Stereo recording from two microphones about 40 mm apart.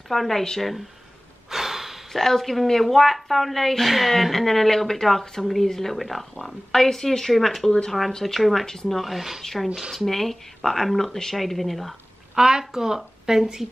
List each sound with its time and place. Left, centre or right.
0.1 s a woman's voice: centre
1.5 s snort: centre
2.2 s a woman's voice: centre
9.0 s a woman's voice: centre
9.4 s speech: centre
9.8 s speech: centre
10.0 s a woman's voice: centre
12.4 s speech: centre